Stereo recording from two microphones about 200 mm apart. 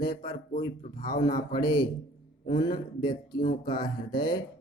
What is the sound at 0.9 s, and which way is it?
Speech, 20° left (ahead or behind).